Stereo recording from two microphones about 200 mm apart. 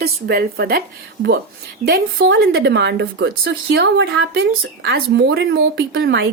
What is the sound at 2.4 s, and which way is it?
Speech, 50° right (ahead or behind).